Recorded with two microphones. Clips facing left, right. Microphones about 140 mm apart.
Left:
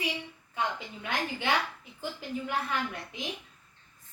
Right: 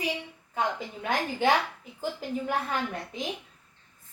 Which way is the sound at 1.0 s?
40° right (ahead or behind).